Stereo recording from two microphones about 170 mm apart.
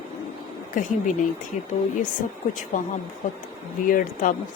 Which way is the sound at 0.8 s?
50° left (ahead or behind).